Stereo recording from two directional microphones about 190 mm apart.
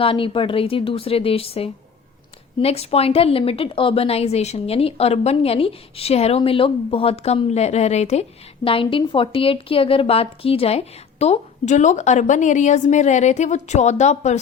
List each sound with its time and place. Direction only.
0.0 s a woman's voice: 30° left (ahead or behind)